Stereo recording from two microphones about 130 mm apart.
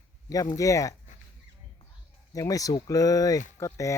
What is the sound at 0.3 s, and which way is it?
Speech, 25° left (ahead or behind).